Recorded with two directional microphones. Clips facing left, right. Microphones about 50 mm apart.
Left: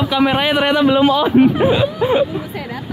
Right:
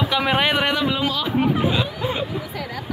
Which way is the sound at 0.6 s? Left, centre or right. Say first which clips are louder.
Left 8 dB; left.